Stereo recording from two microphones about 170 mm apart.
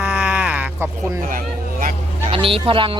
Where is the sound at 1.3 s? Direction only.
55° right (ahead or behind).